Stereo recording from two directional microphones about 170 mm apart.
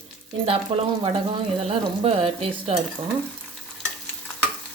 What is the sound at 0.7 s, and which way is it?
Speech, 35° right (ahead or behind).